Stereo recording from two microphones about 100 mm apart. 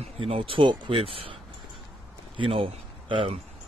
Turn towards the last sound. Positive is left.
turn(degrees=-65)  # may be behind; listen again after turning